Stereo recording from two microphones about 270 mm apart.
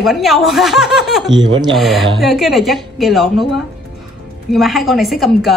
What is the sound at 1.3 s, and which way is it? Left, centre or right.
Speech, centre.